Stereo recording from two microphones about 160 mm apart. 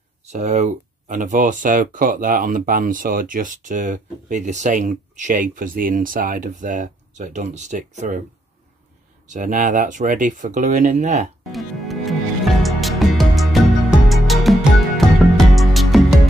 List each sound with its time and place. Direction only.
0.3 s speech: 45° right (ahead or behind)
9.3 s speech: 55° right (ahead or behind)
11.4 s music: centre (ahead or behind)